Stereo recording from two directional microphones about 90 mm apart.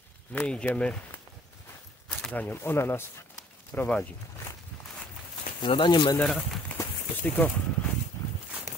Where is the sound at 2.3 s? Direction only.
20° left (ahead or behind).